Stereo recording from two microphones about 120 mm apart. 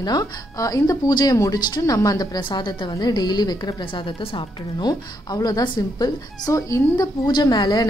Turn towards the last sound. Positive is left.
turn(degrees=35)  # may be behind; listen again after turning